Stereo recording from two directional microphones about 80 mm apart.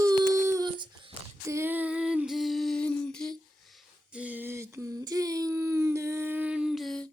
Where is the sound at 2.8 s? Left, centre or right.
Centre.